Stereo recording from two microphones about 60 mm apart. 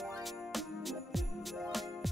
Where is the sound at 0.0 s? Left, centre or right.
Centre.